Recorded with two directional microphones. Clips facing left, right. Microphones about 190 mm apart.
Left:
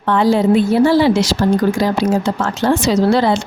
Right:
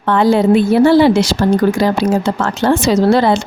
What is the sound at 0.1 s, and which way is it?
Speech, 60° right (ahead or behind).